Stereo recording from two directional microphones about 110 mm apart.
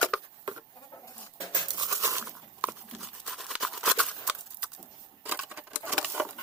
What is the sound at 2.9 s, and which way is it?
Toothbrush, centre (ahead or behind).